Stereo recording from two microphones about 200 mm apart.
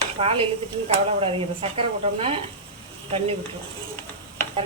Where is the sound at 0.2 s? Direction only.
30° right (ahead or behind).